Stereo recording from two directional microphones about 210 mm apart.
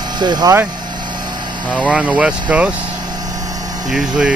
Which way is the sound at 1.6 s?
5° right (ahead or behind).